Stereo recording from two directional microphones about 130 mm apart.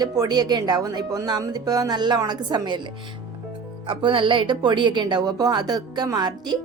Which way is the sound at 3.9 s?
40° right (ahead or behind).